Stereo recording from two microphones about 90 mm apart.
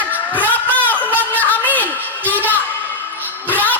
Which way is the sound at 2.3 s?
20° left (ahead or behind).